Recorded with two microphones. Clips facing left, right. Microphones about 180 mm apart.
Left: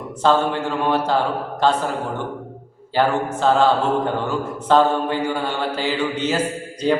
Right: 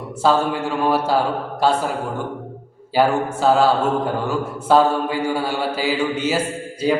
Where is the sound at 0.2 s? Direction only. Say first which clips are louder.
Even; 5° right (ahead or behind).